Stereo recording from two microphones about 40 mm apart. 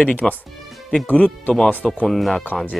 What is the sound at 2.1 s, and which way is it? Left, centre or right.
Speech, centre.